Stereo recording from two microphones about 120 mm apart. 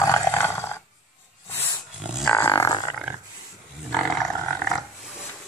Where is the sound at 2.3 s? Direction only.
20° left (ahead or behind).